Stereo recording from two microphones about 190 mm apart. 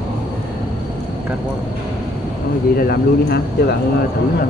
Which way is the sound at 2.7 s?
55° left (ahead or behind).